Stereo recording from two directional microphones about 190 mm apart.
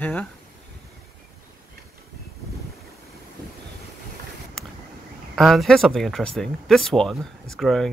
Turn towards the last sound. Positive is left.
turn(degrees=0)  # may be behind; listen again after turning